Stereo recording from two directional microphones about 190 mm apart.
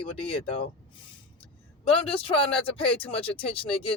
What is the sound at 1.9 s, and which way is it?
Speech, 30° left (ahead or behind).